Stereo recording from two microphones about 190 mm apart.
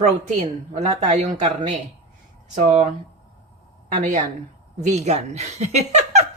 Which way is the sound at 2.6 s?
40° right (ahead or behind).